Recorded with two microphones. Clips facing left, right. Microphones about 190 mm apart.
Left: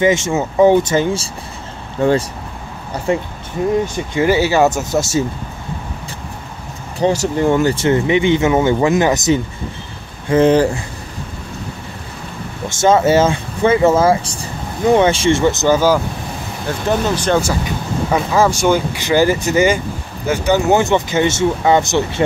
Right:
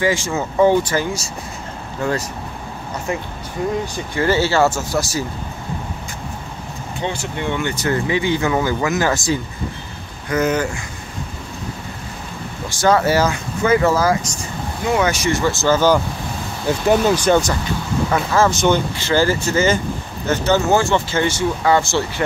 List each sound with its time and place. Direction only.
0.0 s speech: 20° left (ahead or behind)
3.1 s speech: 30° left (ahead or behind)
7.0 s speech: 40° left (ahead or behind)
7.7 s speech: 25° left (ahead or behind)
12.6 s speech: 20° left (ahead or behind)
16.6 s speech: 10° right (ahead or behind)
17.4 s speech: 10° left (ahead or behind)